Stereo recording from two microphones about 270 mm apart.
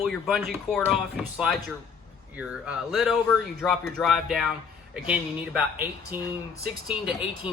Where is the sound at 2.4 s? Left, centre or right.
Centre.